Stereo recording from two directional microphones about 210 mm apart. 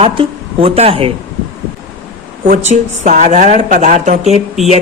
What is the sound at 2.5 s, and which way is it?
A woman's voice, 35° right (ahead or behind).